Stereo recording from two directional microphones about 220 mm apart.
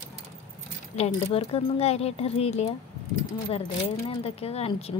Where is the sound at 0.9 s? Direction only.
30° left (ahead or behind).